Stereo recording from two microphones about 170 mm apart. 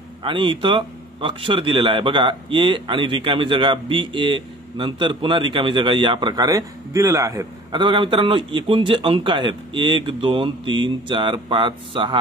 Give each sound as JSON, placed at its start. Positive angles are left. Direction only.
{"t": 0.2, "sound": "a man's voice", "side_deg": -30}